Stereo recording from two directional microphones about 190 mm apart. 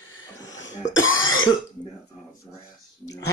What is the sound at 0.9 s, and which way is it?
Cough, 90° left.